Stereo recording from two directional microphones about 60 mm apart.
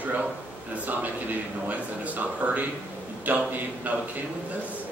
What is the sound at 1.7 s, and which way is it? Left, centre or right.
Speech, right.